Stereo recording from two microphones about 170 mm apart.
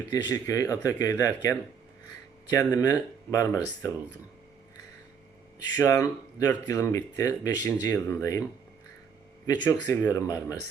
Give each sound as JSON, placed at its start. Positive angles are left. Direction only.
{"t": 0.1, "sound": "speech", "side_deg": 20}
{"t": 5.7, "sound": "speech", "side_deg": 20}
{"t": 9.5, "sound": "speech", "side_deg": 20}